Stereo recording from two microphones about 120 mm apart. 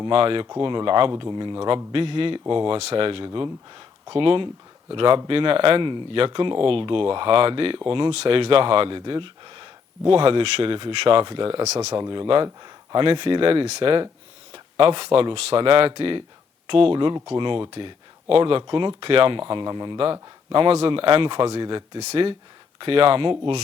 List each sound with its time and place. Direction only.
0.0 s speech: 50° right (ahead or behind)
3.2 s speech: 40° right (ahead or behind)
11.6 s speech: 65° right (ahead or behind)
11.9 s speech: 40° right (ahead or behind)